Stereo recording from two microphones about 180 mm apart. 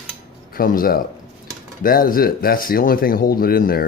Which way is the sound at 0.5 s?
55° left (ahead or behind).